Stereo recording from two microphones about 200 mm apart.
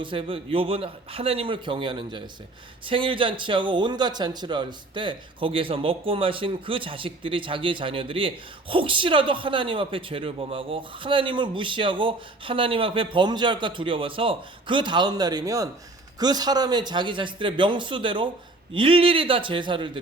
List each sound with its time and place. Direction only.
0.0 s a man's voice: 25° right (ahead or behind)